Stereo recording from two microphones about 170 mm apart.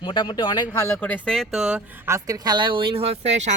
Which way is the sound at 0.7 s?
15° left (ahead or behind).